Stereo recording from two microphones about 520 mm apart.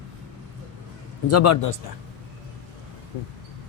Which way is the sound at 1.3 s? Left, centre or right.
Left.